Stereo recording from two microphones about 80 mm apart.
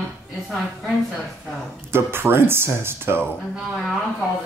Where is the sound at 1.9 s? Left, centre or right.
Right.